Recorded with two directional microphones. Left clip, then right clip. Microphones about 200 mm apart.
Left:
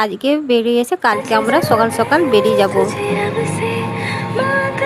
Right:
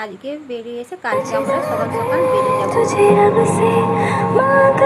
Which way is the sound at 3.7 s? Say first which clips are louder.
Right 5 dB; 45° right (ahead or behind).